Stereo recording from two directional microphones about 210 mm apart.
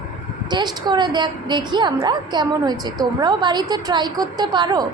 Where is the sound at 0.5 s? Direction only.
20° right (ahead or behind).